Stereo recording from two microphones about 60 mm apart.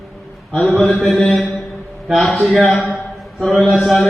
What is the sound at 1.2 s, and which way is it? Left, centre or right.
A man's voice, centre.